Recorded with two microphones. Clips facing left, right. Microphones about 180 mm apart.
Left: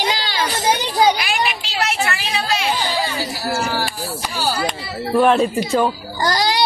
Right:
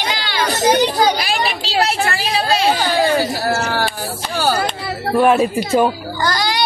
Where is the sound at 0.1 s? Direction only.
35° left (ahead or behind).